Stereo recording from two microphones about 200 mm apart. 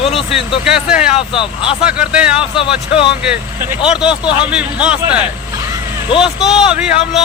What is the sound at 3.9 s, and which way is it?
Speech, 5° right (ahead or behind).